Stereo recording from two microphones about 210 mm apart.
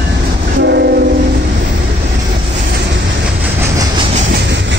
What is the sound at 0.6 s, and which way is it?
Train, 55° right (ahead or behind).